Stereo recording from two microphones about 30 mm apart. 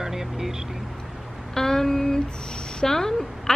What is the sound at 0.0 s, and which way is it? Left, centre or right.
Vehicle, centre.